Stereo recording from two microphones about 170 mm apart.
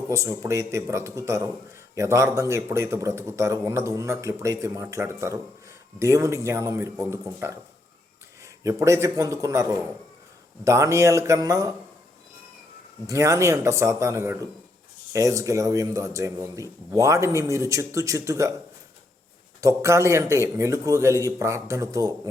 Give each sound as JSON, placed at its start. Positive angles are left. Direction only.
{"t": 0.1, "sound": "a man's voice", "side_deg": -15}
{"t": 8.6, "sound": "a man's voice", "side_deg": -15}
{"t": 13.1, "sound": "a man's voice", "side_deg": -20}
{"t": 19.6, "sound": "a man's voice", "side_deg": -15}